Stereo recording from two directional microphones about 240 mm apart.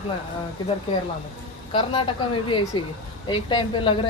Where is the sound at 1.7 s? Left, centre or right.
Left.